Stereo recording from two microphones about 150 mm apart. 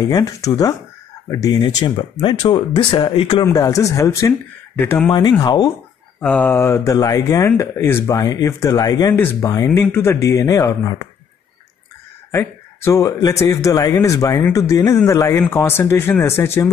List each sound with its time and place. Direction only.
0.0 s speech: 20° left (ahead or behind)
1.5 s speech: 35° left (ahead or behind)
3.4 s speech: 20° left (ahead or behind)
5.4 s speech: 25° left (ahead or behind)
6.2 s speech: 10° left (ahead or behind)
12.3 s speech: 15° left (ahead or behind)